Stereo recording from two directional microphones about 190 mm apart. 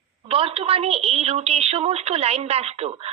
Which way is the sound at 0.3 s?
30° right (ahead or behind).